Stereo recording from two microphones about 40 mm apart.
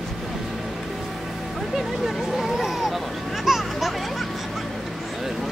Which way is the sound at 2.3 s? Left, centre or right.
Centre.